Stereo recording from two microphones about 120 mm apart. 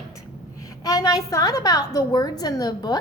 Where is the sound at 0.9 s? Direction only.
30° left (ahead or behind).